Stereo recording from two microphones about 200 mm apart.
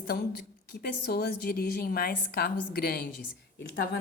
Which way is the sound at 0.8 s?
50° left (ahead or behind).